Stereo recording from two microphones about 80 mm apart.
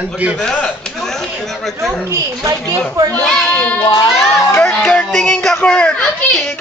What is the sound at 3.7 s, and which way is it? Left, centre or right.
Speech, left.